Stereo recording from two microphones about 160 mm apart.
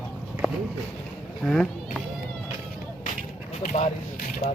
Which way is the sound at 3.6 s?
55° left (ahead or behind).